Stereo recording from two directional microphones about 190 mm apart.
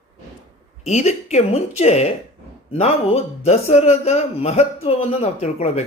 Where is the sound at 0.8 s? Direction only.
35° left (ahead or behind).